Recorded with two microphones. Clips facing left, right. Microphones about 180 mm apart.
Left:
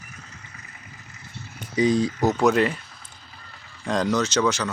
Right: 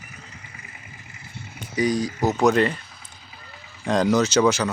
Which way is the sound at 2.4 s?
5° left (ahead or behind).